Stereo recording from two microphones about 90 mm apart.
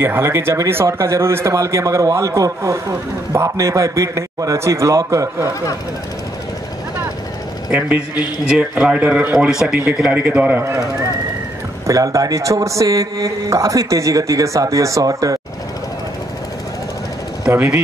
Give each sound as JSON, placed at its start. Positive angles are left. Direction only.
{"t": 0.0, "sound": "speech", "side_deg": -25}
{"t": 7.7, "sound": "a man's voice", "side_deg": -15}
{"t": 11.9, "sound": "speech", "side_deg": -40}
{"t": 17.5, "sound": "speech", "side_deg": -25}